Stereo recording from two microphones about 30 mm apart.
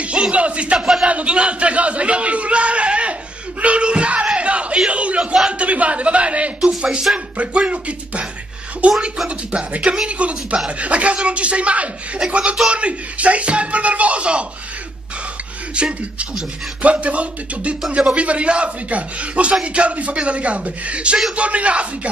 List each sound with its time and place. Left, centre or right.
0.0 s speech: right
0.7 s a man's voice: centre
1.0 s a man's voice: right
4.4 s a sound: right
4.8 s a man's voice: right
15.7 s a man's voice: right